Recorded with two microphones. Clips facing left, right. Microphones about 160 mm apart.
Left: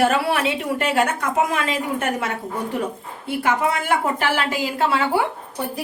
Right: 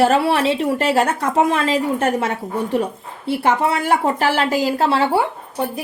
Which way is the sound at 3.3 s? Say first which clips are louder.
Right 3 dB; 35° right (ahead or behind).